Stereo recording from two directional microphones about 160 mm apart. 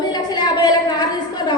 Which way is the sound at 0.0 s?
25° left (ahead or behind).